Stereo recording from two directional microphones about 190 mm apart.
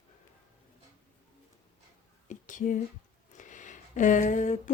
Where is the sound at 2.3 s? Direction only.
40° left (ahead or behind).